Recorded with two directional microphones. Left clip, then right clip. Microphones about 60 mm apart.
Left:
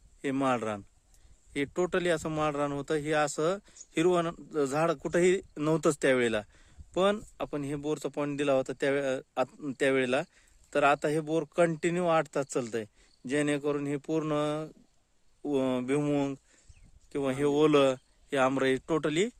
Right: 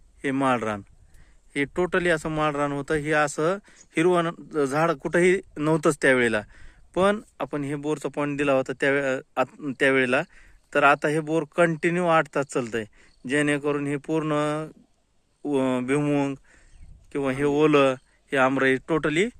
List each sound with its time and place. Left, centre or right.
0.2 s speech: centre
9.5 s speech: centre
17.1 s speech: left
17.3 s speech: left; by 19.4 s centre